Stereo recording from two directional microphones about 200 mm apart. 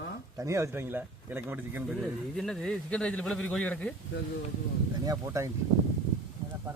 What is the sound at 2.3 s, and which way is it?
Speech, 5° left (ahead or behind).